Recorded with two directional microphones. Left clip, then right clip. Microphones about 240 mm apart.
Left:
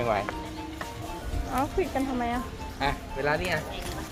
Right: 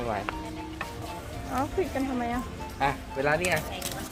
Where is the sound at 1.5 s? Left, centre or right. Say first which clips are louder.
Left 1 dB; centre.